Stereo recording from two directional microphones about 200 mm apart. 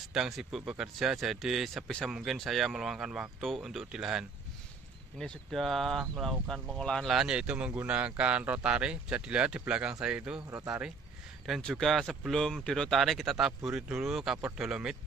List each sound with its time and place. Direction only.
0.1 s speech: centre (ahead or behind)